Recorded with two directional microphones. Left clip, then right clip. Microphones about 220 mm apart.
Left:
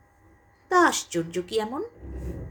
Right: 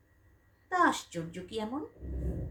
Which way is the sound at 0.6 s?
45° left (ahead or behind).